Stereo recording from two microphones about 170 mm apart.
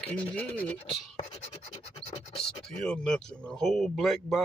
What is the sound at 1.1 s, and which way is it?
Scratch, 40° left (ahead or behind).